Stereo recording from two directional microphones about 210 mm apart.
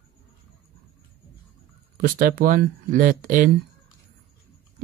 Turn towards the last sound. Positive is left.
turn(degrees=-40)  # may be behind; listen again after turning